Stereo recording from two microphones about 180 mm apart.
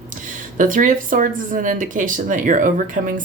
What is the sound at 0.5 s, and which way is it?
Speech, 45° right (ahead or behind).